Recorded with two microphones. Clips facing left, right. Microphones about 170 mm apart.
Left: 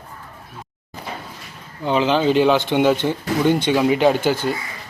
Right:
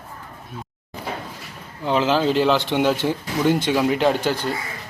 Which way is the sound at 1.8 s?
Centre (ahead or behind).